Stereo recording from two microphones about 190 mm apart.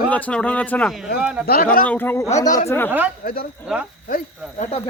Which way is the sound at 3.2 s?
50° left (ahead or behind).